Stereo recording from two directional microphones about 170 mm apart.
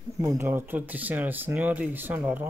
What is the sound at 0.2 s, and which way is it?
Speech, 15° right (ahead or behind).